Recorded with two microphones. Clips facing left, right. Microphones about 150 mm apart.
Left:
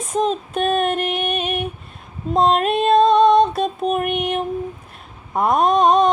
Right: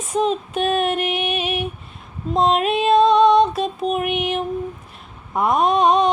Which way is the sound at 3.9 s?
45° left (ahead or behind).